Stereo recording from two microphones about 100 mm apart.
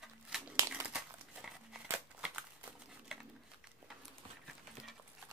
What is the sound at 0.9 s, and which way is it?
Crumpling, 5° right (ahead or behind).